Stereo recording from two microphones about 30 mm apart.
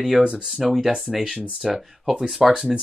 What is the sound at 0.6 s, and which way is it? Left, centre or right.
Speech, centre.